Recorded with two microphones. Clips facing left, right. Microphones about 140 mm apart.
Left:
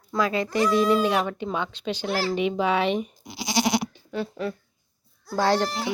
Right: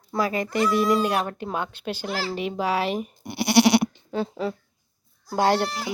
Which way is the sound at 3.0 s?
60° right (ahead or behind).